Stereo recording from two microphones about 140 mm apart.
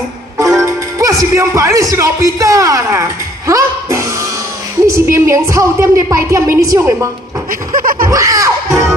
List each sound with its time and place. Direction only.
0.9 s a man's voice: 25° right (ahead or behind)
7.7 s laughter: 80° right
8.1 s a man's voice: 25° right (ahead or behind)